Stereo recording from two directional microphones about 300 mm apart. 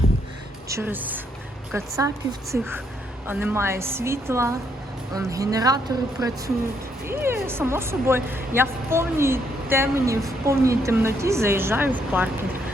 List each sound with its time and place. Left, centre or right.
0.7 s a woman's voice: centre